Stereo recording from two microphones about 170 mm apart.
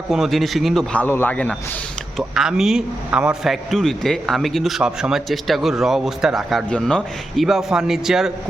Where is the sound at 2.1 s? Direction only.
5° right (ahead or behind).